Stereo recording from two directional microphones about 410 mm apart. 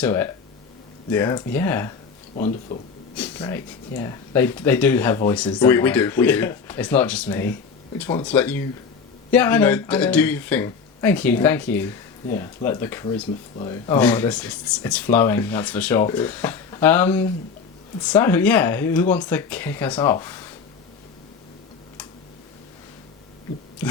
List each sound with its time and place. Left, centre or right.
0.0 s speech: centre
2.3 s speech: centre
3.2 s speech: centre